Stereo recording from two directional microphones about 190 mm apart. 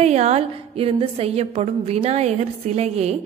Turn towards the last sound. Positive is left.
turn(degrees=-35)  # may be behind; listen again after turning